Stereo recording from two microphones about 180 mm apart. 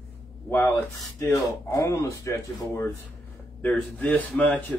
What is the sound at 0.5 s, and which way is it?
Speech, 10° left (ahead or behind).